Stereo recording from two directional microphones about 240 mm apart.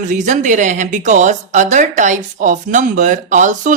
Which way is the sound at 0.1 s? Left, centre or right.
Right.